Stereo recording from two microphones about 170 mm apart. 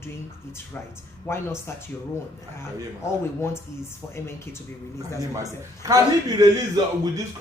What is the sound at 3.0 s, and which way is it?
A woman's voice, 15° left (ahead or behind).